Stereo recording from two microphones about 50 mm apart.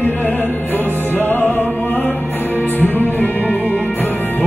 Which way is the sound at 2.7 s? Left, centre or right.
Left.